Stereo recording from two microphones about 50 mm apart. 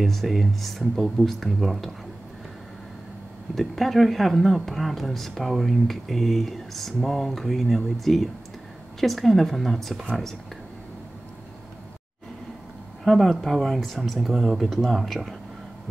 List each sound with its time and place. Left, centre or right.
0.0 s speech: centre
3.5 s speech: centre
13.0 s speech: centre